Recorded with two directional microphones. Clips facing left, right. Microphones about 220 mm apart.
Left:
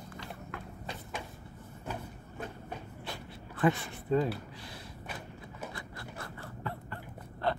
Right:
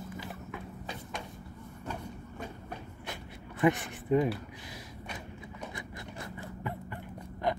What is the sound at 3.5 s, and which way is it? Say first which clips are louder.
Speech: right 2 dB; 15° right (ahead or behind).